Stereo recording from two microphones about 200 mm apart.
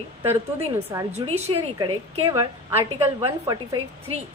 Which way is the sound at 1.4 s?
25° right (ahead or behind).